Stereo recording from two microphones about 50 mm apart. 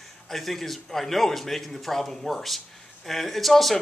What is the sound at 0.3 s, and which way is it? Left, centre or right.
Speech, centre.